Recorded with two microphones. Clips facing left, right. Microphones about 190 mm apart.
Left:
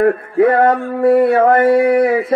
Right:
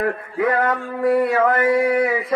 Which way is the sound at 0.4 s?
30° left (ahead or behind).